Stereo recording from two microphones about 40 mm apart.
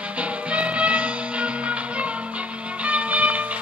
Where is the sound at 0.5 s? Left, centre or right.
Right.